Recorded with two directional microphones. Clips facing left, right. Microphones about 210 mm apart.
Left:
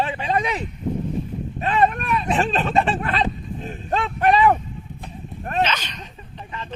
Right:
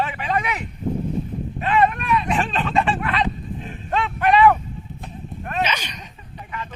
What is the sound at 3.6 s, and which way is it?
Livestock, 40° left (ahead or behind).